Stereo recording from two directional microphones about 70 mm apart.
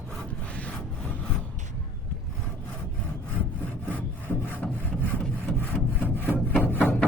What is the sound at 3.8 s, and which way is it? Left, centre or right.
Sawing, left.